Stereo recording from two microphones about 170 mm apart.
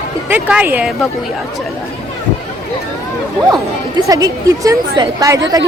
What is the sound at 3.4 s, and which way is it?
A woman's voice, 20° right (ahead or behind).